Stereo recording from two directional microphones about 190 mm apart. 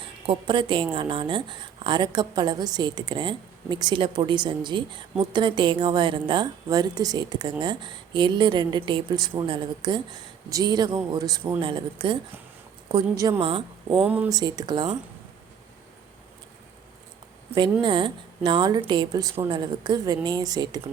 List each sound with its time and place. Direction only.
0.3 s a woman's voice: 25° right (ahead or behind)
13.9 s speech: 5° right (ahead or behind)
14.3 s a woman's voice: 20° right (ahead or behind)
17.5 s a woman's voice: 25° right (ahead or behind)